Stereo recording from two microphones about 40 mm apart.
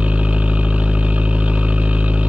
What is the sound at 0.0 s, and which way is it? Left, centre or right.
Vehicle, right.